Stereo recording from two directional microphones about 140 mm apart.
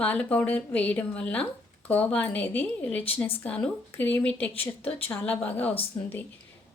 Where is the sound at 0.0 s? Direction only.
10° left (ahead or behind).